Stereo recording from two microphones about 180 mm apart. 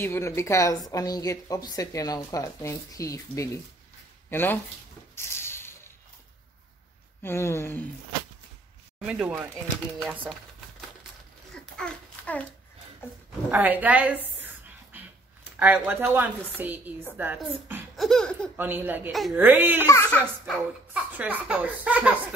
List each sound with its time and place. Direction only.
0.0 s speech: 15° left (ahead or behind)
5.1 s cupboard open or close: 15° left (ahead or behind)
7.2 s speech: 15° left (ahead or behind)
9.0 s laughter: 5° right (ahead or behind)
11.5 s babbling: 5° left (ahead or behind)
13.5 s a sound: 10° right (ahead or behind)
15.6 s speech: 10° right (ahead or behind)
17.9 s laughter: centre (ahead or behind)
18.6 s speech: 10° right (ahead or behind)
19.9 s speech: 15° left (ahead or behind)
20.4 s speech: 5° right (ahead or behind)